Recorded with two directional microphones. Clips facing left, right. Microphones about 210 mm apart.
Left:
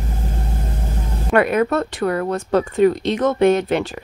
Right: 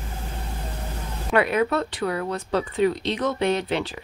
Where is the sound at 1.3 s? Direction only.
50° left (ahead or behind).